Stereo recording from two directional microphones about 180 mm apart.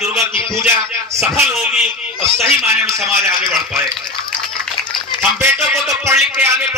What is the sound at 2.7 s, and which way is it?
Speech, 15° right (ahead or behind).